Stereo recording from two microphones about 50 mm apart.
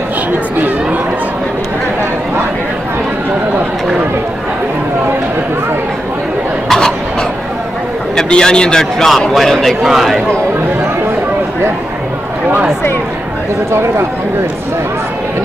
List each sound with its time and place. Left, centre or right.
6.7 s a sound: centre
8.2 s a man's voice: centre
13.7 s speech: right